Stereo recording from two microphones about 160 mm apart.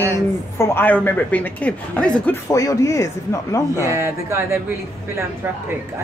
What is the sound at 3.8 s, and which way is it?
Speech, 15° right (ahead or behind).